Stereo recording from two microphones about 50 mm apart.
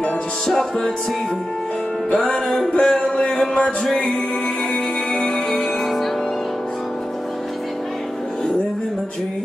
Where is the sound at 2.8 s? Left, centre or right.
Centre.